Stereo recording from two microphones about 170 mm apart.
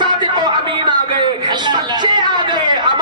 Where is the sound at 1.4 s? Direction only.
25° right (ahead or behind).